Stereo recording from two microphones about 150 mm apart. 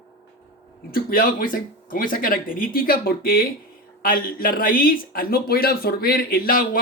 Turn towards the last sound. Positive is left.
turn(degrees=70)  # may be behind; listen again after turning